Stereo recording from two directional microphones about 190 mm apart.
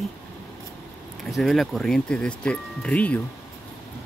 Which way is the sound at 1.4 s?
Centre (ahead or behind).